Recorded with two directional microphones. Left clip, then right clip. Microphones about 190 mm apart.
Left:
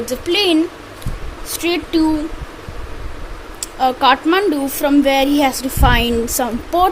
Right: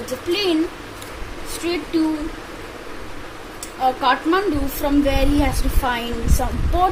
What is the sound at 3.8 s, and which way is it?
A woman's voice, 40° left (ahead or behind).